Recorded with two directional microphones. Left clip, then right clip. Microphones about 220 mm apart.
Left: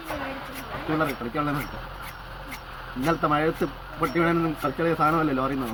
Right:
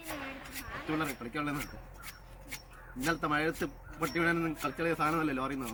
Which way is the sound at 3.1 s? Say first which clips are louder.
Left 8 dB; 15° right (ahead or behind).